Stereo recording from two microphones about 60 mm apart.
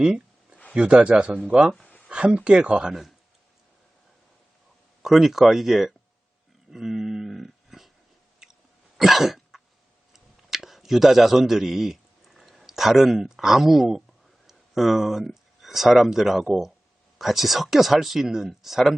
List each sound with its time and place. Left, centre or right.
0.0 s a sound: centre
0.7 s speech: centre
2.9 s speech: centre
5.0 s speech: centre
6.7 s dog: centre
9.0 s cough: centre
10.1 s a sound: centre
15.6 s speech: centre